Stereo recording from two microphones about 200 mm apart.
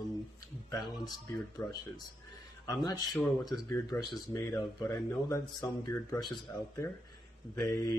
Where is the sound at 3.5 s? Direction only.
20° left (ahead or behind).